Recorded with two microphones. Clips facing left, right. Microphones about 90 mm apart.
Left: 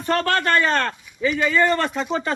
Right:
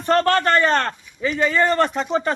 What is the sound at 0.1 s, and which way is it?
A man's voice, 35° right (ahead or behind).